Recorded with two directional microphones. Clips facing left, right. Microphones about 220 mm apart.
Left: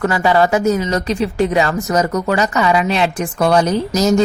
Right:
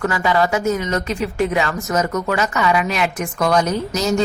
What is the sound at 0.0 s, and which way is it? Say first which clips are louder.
Speech: left 4 dB; 35° left (ahead or behind).